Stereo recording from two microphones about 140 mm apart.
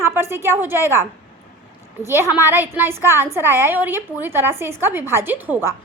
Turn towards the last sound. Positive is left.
turn(degrees=-15)  # may be behind; listen again after turning